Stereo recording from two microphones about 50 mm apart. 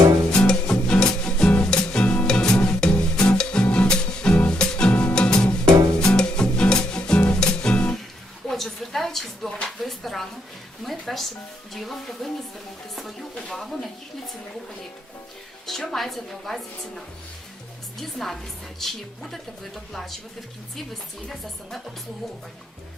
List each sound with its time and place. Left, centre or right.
0.3 s music: centre
8.4 s a sound: centre
10.8 s music: centre
11.7 s a woman's voice: centre
13.3 s speech: centre
15.6 s a woman's voice: centre
21.2 s a woman's voice: centre